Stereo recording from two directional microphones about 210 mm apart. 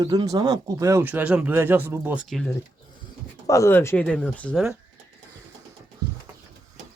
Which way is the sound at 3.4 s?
15° left (ahead or behind).